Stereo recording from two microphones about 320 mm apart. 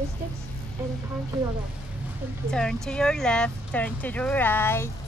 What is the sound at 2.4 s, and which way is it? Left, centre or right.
Speech, centre.